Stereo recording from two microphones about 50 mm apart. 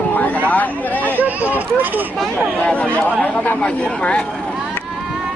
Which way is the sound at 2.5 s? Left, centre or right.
Left.